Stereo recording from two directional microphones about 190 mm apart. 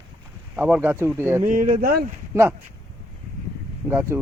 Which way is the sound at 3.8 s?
10° right (ahead or behind).